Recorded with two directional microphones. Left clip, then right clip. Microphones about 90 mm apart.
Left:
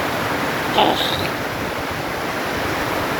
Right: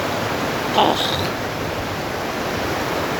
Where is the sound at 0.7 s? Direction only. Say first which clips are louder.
Even; 20° right (ahead or behind).